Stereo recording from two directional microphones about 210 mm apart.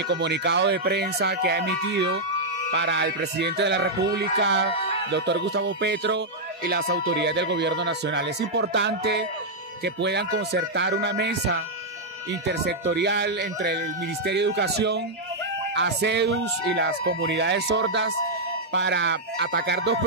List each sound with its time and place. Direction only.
0.1 s speech: 55° right (ahead or behind)